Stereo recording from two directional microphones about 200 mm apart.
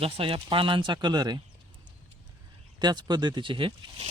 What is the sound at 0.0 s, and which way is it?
Speech, 25° right (ahead or behind).